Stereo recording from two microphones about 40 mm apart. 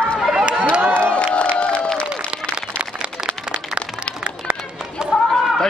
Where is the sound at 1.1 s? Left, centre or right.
Left.